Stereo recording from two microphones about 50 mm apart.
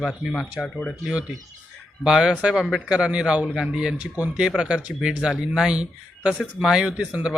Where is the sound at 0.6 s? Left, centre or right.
Left.